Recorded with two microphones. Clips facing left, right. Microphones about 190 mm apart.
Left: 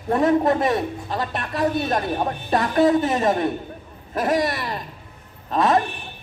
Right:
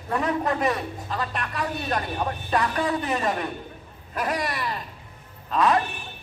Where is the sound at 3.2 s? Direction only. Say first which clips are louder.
Left 6 dB; 25° left (ahead or behind).